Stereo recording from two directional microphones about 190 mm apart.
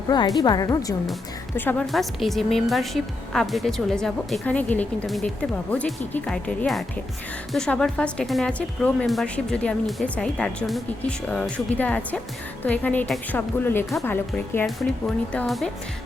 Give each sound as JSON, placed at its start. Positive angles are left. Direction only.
{"t": 0.3, "sound": "a woman's voice", "side_deg": 20}
{"t": 1.5, "sound": "a woman's voice", "side_deg": 5}